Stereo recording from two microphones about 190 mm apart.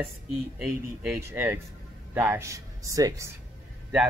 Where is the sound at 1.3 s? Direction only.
10° right (ahead or behind).